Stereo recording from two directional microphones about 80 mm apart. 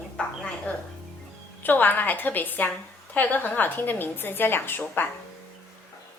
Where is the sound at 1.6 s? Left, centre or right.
Left.